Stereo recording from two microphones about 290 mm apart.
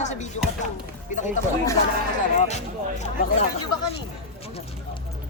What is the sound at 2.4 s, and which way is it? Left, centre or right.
Speech, left.